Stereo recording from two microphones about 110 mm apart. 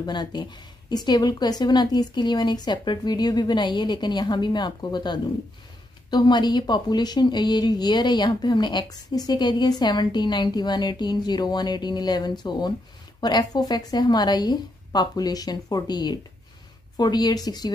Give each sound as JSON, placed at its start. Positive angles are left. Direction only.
{"t": 0.0, "sound": "speech", "side_deg": 40}